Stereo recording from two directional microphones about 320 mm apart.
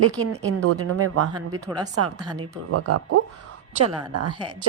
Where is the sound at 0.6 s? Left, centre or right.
Right.